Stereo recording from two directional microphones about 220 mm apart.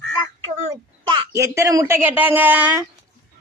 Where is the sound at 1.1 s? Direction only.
15° right (ahead or behind).